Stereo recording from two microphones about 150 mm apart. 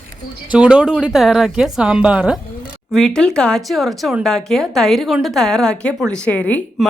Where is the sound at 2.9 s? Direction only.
5° left (ahead or behind).